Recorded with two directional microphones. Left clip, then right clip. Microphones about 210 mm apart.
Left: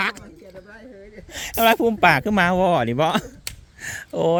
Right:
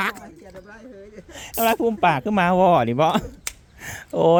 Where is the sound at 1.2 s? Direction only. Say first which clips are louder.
Left 4 dB; 10° left (ahead or behind).